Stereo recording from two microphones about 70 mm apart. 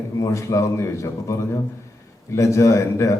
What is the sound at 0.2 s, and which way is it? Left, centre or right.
A man's voice, left.